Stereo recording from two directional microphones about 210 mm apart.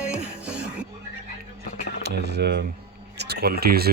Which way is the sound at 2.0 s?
50° right (ahead or behind).